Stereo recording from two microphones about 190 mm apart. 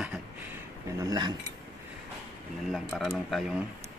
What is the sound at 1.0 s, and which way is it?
Speech, 20° right (ahead or behind).